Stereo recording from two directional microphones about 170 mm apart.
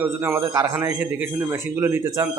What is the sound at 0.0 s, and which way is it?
A man's voice, 10° right (ahead or behind).